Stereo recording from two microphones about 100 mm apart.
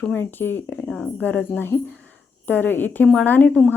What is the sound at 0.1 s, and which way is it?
Speech, 20° left (ahead or behind).